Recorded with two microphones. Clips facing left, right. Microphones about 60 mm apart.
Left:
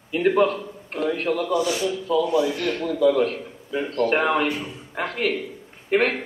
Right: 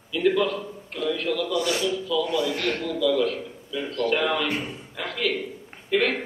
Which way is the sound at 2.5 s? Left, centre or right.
Right.